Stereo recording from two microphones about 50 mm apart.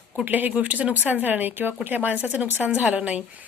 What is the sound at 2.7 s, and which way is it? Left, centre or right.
Speech, right.